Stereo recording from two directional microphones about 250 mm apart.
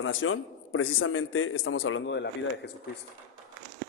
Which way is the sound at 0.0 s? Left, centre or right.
Left.